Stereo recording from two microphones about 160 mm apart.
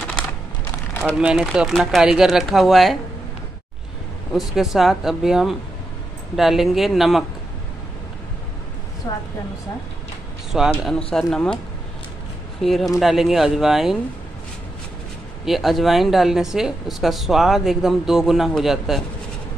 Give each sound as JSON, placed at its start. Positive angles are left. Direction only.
{"t": 1.0, "sound": "speech", "side_deg": -5}
{"t": 4.3, "sound": "speech", "side_deg": 0}
{"t": 9.1, "sound": "speech", "side_deg": 25}
{"t": 10.8, "sound": "speech", "side_deg": 0}
{"t": 12.6, "sound": "speech", "side_deg": 0}
{"t": 15.4, "sound": "speech", "side_deg": 0}